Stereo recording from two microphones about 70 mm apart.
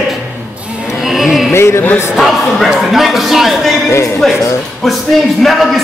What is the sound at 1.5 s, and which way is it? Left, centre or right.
Speech, left.